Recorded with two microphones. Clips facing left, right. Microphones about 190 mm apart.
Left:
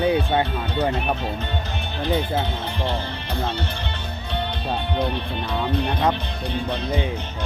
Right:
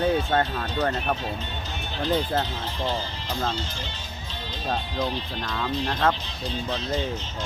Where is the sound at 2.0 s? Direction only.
60° left (ahead or behind).